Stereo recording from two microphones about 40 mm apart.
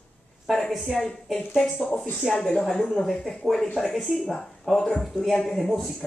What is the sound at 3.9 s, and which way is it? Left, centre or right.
Speech, centre.